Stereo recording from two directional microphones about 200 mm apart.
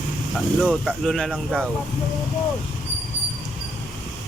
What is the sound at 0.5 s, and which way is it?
Speech, centre (ahead or behind).